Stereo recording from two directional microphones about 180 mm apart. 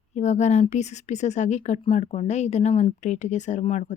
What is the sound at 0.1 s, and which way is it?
Speech, 40° left (ahead or behind).